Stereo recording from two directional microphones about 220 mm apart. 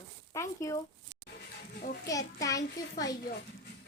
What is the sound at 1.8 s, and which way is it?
Speech, 45° left (ahead or behind).